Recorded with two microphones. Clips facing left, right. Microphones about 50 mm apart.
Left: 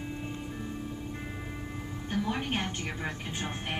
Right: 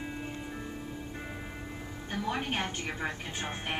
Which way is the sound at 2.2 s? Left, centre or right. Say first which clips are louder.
Right 3 dB; centre.